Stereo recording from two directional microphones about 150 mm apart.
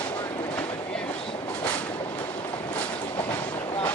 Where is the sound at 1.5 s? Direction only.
10° left (ahead or behind).